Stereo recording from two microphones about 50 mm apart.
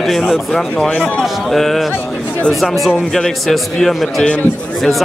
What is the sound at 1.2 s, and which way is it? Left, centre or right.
A man's voice, centre.